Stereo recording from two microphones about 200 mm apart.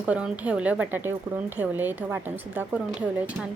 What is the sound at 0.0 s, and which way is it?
A woman's voice, 5° right (ahead or behind).